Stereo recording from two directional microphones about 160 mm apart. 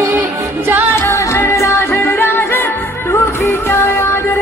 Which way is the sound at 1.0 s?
20° left (ahead or behind).